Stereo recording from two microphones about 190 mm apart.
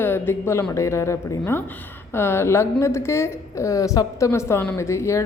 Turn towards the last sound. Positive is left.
turn(degrees=15)  # may be behind; listen again after turning